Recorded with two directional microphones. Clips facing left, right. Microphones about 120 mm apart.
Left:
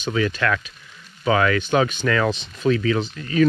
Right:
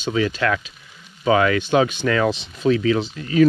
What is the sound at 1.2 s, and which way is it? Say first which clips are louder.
Speech: right 2 dB; 25° right (ahead or behind).